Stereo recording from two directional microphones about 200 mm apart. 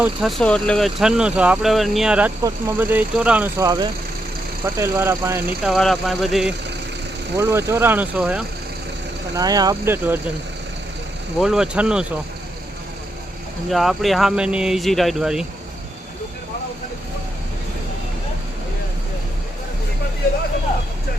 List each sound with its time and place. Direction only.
0.0 s speech: centre (ahead or behind)
5.7 s speech: centre (ahead or behind)
7.3 s speech: 15° right (ahead or behind)
9.3 s speech: 20° right (ahead or behind)
11.3 s speech: 5° right (ahead or behind)
13.7 s speech: centre (ahead or behind)